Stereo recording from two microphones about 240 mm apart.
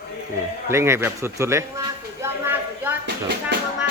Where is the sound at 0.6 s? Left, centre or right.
Centre.